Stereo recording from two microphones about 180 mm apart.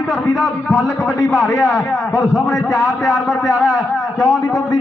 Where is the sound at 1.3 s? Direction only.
5° right (ahead or behind).